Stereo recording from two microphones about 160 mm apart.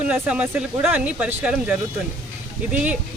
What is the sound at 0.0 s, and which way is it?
Speech, 10° right (ahead or behind).